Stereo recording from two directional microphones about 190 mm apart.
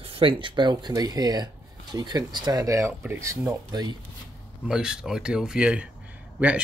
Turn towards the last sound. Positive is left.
turn(degrees=-10)  # may be behind; listen again after turning